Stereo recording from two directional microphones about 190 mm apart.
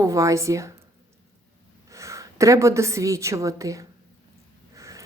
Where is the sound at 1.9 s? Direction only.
15° right (ahead or behind).